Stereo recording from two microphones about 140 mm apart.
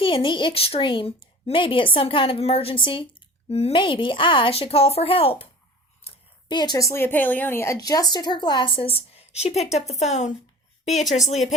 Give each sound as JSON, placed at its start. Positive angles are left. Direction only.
{"t": 0.0, "sound": "speech", "side_deg": 35}
{"t": 6.1, "sound": "a sound", "side_deg": 45}
{"t": 6.5, "sound": "speech", "side_deg": 30}